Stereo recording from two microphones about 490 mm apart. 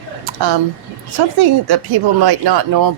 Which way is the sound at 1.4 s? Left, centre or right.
Right.